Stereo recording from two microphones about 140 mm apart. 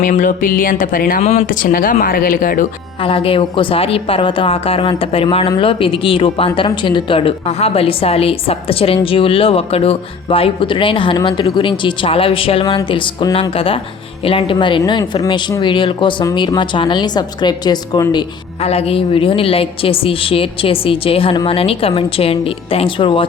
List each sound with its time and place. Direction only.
0.0 s a woman's voice: 65° left (ahead or behind); by 1.2 s 90° left
1.2 s a woman's voice: 50° left (ahead or behind)
1.5 s a woman's voice: 75° left (ahead or behind)
3.0 s a woman's voice: 40° left (ahead or behind)
18.6 s a woman's voice: 45° left (ahead or behind)